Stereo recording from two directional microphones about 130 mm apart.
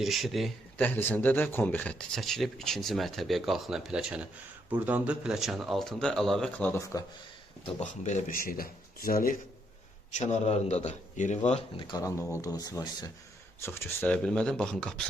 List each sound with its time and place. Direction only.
0.0 s speech: centre (ahead or behind)
0.8 s speech: 15° left (ahead or behind)
7.7 s speech: 60° left (ahead or behind); by 9.4 s 90° left
10.1 s a man's voice: 60° left (ahead or behind)
11.8 s speech: 35° left (ahead or behind)
12.0 s speech: 25° left (ahead or behind)
13.6 s speech: 20° left (ahead or behind)